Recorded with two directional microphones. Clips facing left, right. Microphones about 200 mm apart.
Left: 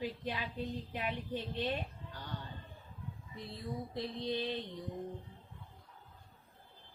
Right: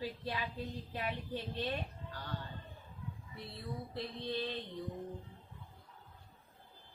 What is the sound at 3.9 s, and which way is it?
Speech, 15° left (ahead or behind).